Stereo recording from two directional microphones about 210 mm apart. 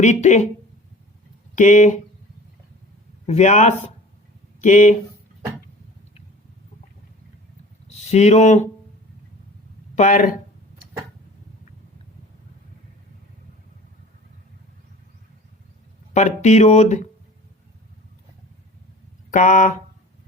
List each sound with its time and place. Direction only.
0.0 s speech: 35° left (ahead or behind)
1.5 s speech: 35° left (ahead or behind)
3.2 s speech: 35° left (ahead or behind)
7.9 s speech: 30° left (ahead or behind)
9.9 s speech: 35° left (ahead or behind)
16.1 s speech: 35° left (ahead or behind)
19.3 s speech: 35° left (ahead or behind)